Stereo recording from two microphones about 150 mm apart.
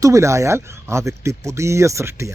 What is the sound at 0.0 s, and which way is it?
Speech, 20° right (ahead or behind).